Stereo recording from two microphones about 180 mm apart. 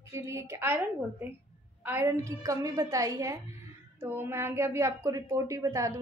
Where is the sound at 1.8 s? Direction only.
15° right (ahead or behind).